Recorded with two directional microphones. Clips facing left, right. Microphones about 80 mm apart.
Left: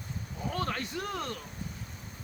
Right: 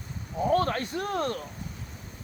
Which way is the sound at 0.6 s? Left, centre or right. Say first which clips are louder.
Right 6 dB; right.